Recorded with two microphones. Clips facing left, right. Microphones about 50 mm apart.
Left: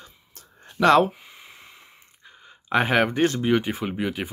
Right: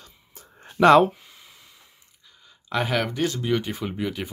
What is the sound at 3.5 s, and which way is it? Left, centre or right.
Speech, centre.